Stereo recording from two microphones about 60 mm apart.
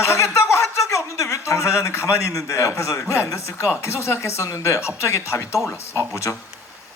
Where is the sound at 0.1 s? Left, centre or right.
Left.